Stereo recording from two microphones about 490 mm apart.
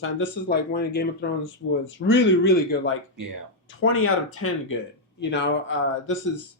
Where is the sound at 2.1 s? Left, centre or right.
Left.